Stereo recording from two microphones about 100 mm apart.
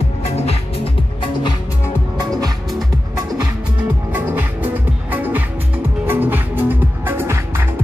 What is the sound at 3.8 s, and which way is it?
Music, 20° right (ahead or behind).